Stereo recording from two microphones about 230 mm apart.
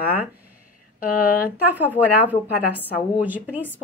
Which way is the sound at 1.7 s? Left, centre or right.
Centre.